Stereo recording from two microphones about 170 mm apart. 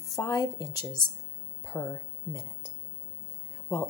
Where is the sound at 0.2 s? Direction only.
20° left (ahead or behind).